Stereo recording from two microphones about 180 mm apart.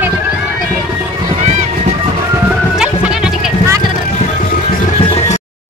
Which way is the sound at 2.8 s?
5° right (ahead or behind).